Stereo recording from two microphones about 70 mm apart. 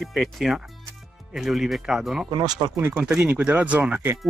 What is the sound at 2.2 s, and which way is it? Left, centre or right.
Speech, right.